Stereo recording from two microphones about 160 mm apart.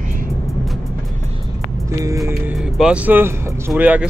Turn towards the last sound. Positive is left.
turn(degrees=-10)  # may be behind; listen again after turning